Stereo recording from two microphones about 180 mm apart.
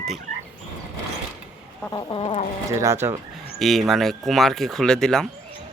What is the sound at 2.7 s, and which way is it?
Speech, 15° right (ahead or behind).